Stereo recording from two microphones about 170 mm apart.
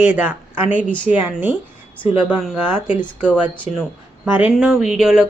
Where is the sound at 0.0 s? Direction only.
10° right (ahead or behind).